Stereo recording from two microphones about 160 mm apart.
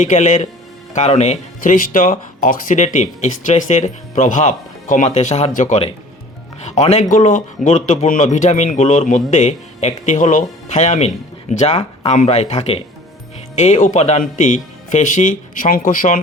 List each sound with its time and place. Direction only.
0.0 s speech: 50° left (ahead or behind)
1.6 s speech: 55° left (ahead or behind)